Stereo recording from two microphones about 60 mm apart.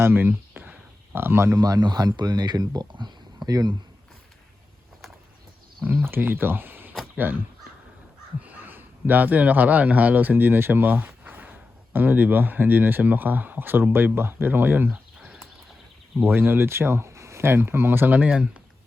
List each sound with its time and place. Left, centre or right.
0.0 s a sound: right
1.5 s speech: right
5.8 s speech: right
15.2 s horse: centre
16.2 s speech: right; by 18.6 s centre